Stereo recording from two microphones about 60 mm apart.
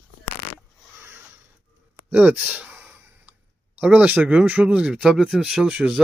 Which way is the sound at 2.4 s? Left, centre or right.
Right.